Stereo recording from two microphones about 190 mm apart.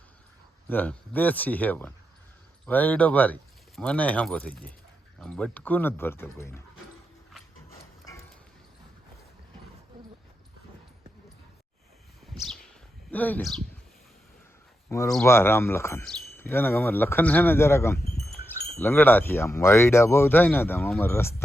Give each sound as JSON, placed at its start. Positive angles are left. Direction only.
{"t": 0.7, "sound": "speech", "side_deg": 10}
{"t": 12.3, "sound": "bird", "side_deg": 0}
{"t": 13.1, "sound": "speech", "side_deg": 10}
{"t": 14.8, "sound": "speech", "side_deg": 15}
{"t": 17.9, "sound": "speech", "side_deg": 55}
{"t": 18.8, "sound": "speech", "side_deg": 10}